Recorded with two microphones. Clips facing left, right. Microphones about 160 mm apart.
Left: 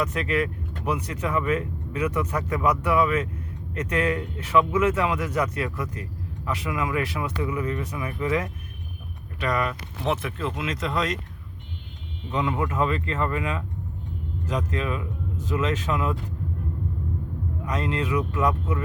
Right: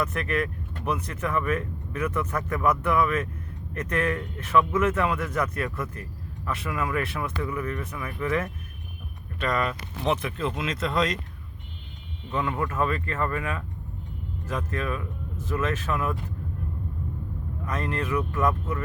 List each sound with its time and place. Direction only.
0.0 s speech: 15° left (ahead or behind)
12.3 s speech: 15° left (ahead or behind)
17.7 s speech: 15° left (ahead or behind)